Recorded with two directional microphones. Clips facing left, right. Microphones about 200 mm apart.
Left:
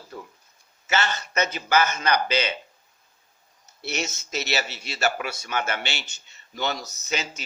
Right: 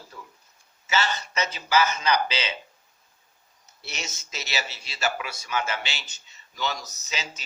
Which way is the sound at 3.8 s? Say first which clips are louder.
Left 8 dB; 60° left (ahead or behind).